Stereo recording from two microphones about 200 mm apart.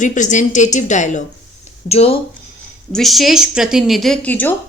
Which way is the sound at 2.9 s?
Centre (ahead or behind).